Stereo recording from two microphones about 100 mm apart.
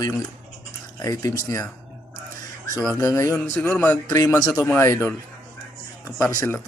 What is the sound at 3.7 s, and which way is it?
Speech, 15° left (ahead or behind).